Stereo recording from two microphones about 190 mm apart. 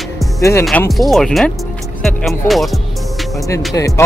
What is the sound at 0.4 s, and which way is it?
Speech, 15° left (ahead or behind).